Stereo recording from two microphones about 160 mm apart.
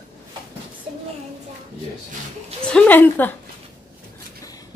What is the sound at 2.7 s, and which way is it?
Speech, 10° left (ahead or behind).